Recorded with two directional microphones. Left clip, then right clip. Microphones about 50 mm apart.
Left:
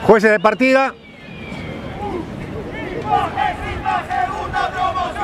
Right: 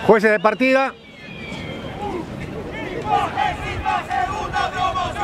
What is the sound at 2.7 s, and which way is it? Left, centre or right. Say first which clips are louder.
Crowd: left 2 dB; centre.